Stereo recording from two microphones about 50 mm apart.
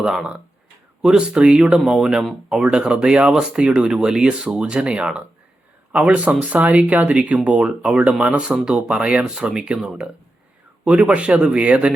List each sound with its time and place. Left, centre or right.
0.0 s speech: centre
1.9 s speech: centre
9.2 s speech: centre; by 11.9 s right